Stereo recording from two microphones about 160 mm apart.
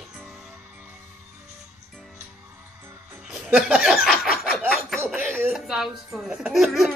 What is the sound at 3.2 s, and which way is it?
Chuckle, 5° right (ahead or behind).